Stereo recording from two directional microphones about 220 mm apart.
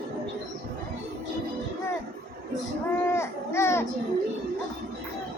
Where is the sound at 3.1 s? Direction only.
10° left (ahead or behind).